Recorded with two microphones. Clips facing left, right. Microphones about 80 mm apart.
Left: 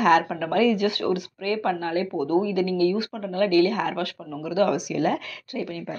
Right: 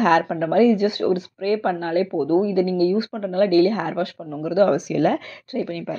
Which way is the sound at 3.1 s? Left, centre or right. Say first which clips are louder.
Right 4 dB; right.